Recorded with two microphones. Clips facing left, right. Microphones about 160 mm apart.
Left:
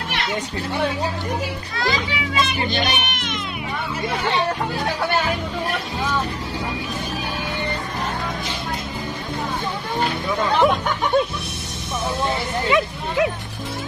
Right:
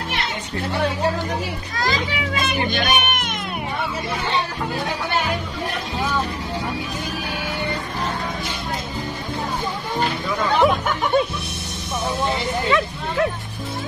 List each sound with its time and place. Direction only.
1.8 s speech: 45° right (ahead or behind)
10.6 s speech: centre (ahead or behind)
12.6 s speech: 15° left (ahead or behind)